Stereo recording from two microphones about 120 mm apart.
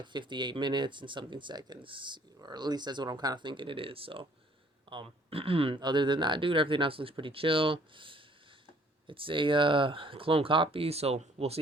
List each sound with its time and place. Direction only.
0.0 s speech: 40° right (ahead or behind); by 11.6 s 60° right (ahead or behind)